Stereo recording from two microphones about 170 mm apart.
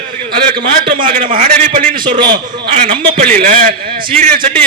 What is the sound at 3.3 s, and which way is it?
Speech, 45° right (ahead or behind).